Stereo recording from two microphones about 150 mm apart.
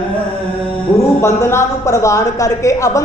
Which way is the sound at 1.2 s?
20° left (ahead or behind).